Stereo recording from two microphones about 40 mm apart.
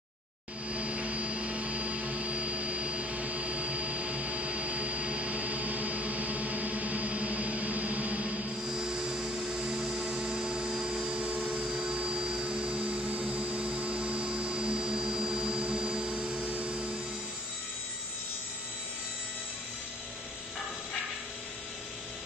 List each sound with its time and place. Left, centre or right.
0.7 s vehicle: right
8.6 s helicopter: centre
11.1 s a sound: right
11.7 s vacuum cleaner: centre
12.0 s vehicle: right